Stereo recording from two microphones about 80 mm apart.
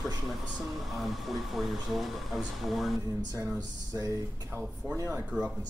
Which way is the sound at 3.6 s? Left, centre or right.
Right.